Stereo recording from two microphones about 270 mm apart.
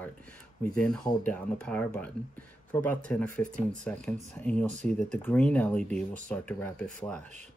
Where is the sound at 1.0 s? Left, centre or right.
Centre.